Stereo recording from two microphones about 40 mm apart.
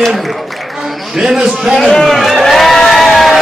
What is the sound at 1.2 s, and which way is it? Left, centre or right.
Speech, centre.